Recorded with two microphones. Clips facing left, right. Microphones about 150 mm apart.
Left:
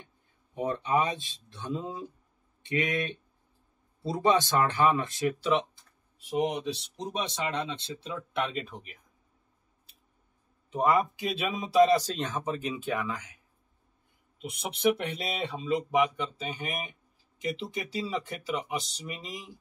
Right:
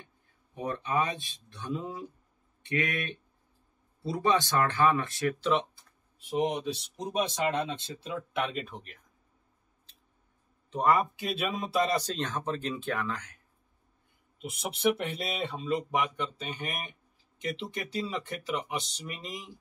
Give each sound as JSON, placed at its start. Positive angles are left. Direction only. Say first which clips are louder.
{"t": 0.6, "sound": "speech", "louder": "left 3 dB", "side_deg": 20}
{"t": 6.2, "sound": "speech", "louder": "even", "side_deg": 0}
{"t": 7.2, "sound": "speech", "louder": "right 4 dB", "side_deg": -45}
{"t": 8.3, "sound": "speech", "louder": "left 2 dB", "side_deg": 0}
{"t": 10.7, "sound": "speech", "louder": "left 1 dB", "side_deg": 5}
{"t": 15.0, "sound": "speech", "louder": "even", "side_deg": 0}